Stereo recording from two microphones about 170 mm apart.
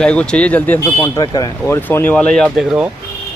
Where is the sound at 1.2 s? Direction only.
25° left (ahead or behind).